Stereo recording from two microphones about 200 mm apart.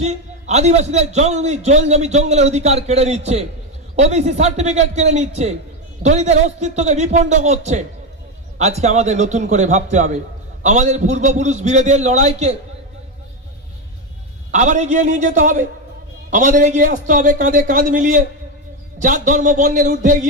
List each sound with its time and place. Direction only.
0.0 s a man's voice: 35° right (ahead or behind)
14.5 s a man's voice: 35° right (ahead or behind)